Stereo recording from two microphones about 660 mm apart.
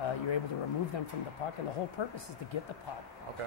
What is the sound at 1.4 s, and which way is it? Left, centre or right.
Speech, left.